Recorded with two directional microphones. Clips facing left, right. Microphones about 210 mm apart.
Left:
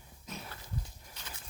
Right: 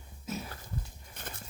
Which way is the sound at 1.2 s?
55° right (ahead or behind).